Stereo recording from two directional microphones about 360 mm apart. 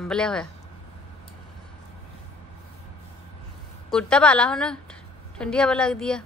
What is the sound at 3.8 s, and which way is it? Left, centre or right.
A woman's voice, centre.